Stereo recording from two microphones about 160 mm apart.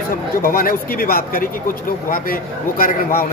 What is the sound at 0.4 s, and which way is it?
Speech, 65° left (ahead or behind).